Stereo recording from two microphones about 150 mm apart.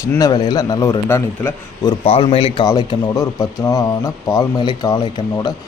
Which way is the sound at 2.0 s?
40° left (ahead or behind).